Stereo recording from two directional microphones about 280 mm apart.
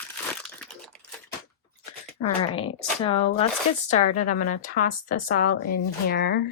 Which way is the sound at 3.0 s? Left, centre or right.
Centre.